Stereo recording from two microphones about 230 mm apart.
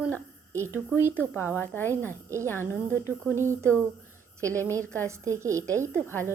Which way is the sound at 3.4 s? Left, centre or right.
Centre.